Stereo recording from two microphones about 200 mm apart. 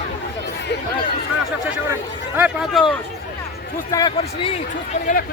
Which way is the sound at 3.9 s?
20° left (ahead or behind).